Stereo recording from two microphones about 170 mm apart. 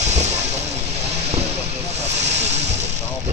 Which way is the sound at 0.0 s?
40° right (ahead or behind).